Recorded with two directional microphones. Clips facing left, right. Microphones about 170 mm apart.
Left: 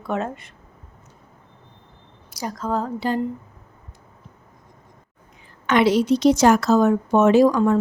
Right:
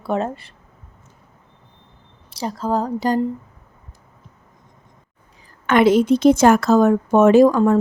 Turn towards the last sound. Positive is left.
turn(degrees=-45)  # may be behind; listen again after turning